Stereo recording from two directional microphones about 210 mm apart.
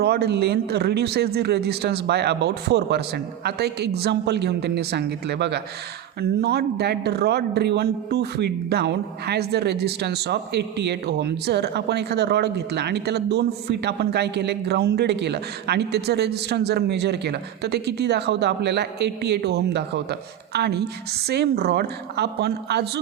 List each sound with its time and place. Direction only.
0.0 s speech: 50° right (ahead or behind)